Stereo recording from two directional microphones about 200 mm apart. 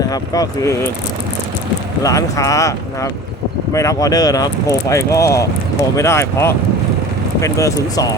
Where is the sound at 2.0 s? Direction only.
15° left (ahead or behind).